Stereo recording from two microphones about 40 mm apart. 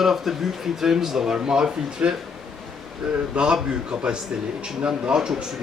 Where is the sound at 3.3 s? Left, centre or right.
Right.